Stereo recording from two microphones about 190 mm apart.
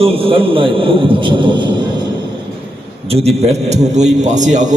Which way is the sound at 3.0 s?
30° right (ahead or behind).